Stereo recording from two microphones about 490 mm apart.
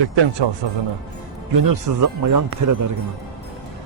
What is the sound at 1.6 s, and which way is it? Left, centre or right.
Speech, right.